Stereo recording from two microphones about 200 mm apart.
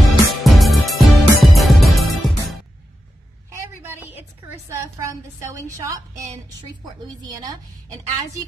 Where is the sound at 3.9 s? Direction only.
10° right (ahead or behind).